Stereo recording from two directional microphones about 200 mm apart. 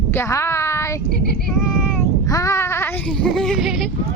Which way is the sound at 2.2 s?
15° left (ahead or behind).